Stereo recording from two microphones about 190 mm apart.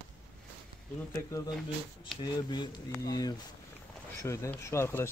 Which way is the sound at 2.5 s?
20° left (ahead or behind).